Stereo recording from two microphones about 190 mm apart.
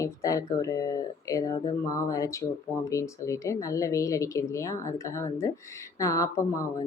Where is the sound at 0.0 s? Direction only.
15° left (ahead or behind).